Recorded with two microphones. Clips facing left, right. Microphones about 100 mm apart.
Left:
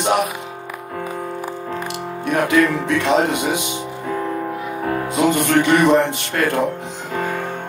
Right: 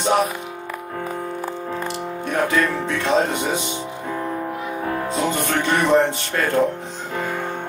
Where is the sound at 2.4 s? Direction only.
15° left (ahead or behind).